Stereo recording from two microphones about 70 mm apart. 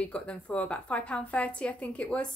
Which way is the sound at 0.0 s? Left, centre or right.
Centre.